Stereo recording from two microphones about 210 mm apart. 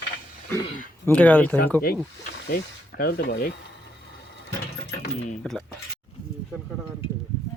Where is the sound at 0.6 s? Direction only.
40° left (ahead or behind).